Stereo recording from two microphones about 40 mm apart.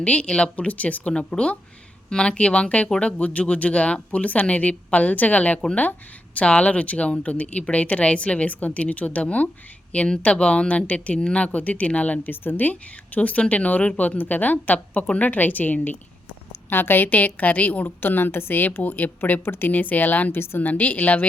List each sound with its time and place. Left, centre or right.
0.0 s speech: left
0.5 s a woman's voice: left
1.1 s a woman's voice: left
12.2 s a woman's voice: left
13.1 s a woman's voice: left
16.6 s a woman's voice: left
17.8 s a woman's voice: left
19.5 s speech: left
19.7 s a woman's voice: left
20.3 s a woman's voice: left
20.6 s a woman's voice: left